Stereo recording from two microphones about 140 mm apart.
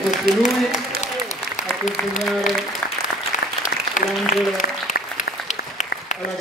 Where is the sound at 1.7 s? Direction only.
Centre (ahead or behind).